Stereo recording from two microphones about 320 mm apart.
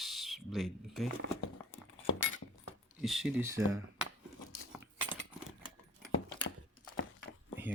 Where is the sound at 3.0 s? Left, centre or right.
Centre.